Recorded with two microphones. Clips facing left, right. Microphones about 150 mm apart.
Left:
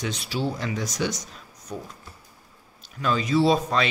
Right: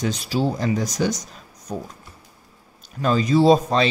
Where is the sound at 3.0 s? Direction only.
35° right (ahead or behind).